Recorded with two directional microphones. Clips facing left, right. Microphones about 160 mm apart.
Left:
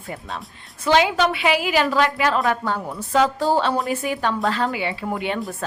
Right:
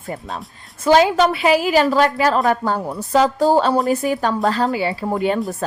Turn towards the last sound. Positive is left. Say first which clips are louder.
# right 6 dB
turn(degrees=-40)  # may be behind; listen again after turning